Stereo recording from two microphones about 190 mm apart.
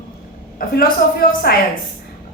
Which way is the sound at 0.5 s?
50° left (ahead or behind).